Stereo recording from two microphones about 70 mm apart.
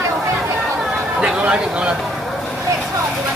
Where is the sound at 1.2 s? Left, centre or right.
Centre.